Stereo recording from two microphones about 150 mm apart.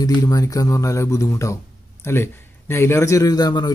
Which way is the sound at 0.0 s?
25° left (ahead or behind).